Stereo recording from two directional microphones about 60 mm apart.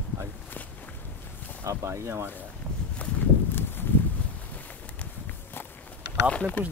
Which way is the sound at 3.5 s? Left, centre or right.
Left.